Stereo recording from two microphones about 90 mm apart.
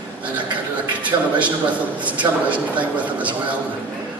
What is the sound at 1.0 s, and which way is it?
A man's voice, 15° right (ahead or behind).